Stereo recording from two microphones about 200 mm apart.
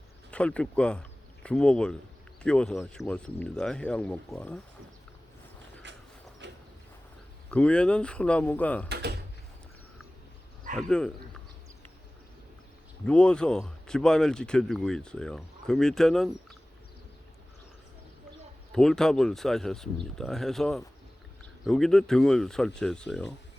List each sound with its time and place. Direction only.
0.3 s speech: 5° left (ahead or behind)
5.8 s a sound: 65° right (ahead or behind)
7.5 s speech: 5° left (ahead or behind)
8.9 s door: 55° right (ahead or behind)
10.8 s speech: 5° left (ahead or behind)
13.1 s speech: 5° left (ahead or behind)
18.7 s speech: centre (ahead or behind)